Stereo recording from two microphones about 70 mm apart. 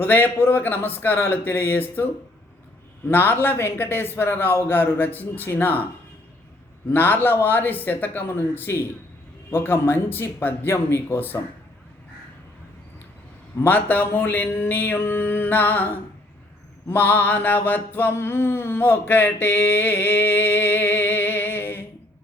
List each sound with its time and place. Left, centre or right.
0.0 s a man's voice: left
3.1 s a man's voice: left
6.9 s a sound: left
9.5 s a man's voice: left
13.6 s a sound: left
16.9 s mantra: left